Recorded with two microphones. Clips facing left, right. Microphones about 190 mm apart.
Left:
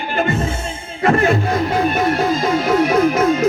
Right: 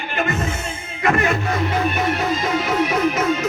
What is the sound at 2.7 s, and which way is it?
Music, 35° left (ahead or behind).